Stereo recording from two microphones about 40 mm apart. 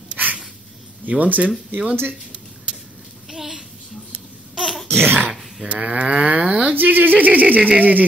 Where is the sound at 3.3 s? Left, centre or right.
Centre.